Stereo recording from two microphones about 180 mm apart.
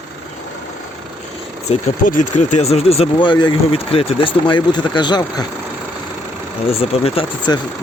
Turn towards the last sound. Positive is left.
turn(degrees=30)  # may be behind; listen again after turning